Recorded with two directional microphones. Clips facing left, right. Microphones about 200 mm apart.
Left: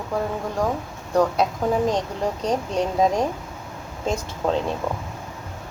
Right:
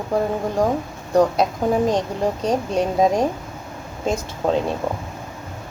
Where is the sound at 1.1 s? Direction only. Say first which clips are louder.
Right 3 dB; 15° right (ahead or behind).